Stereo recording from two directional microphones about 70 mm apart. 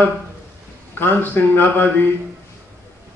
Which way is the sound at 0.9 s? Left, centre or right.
Left.